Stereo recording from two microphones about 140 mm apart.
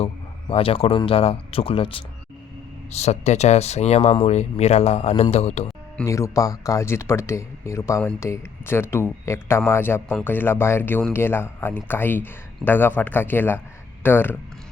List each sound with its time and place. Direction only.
0.0 s speech: 45° left (ahead or behind)
2.9 s speech: 50° left (ahead or behind)
6.1 s speech: 20° left (ahead or behind)